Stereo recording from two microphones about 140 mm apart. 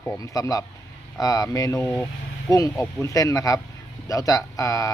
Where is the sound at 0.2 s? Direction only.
25° left (ahead or behind).